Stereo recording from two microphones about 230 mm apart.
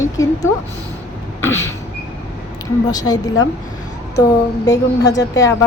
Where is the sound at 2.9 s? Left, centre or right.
Centre.